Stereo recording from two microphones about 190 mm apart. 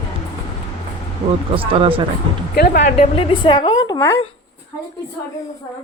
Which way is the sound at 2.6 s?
55° left (ahead or behind).